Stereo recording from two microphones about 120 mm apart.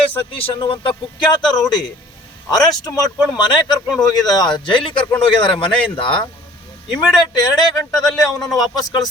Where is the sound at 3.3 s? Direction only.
40° left (ahead or behind).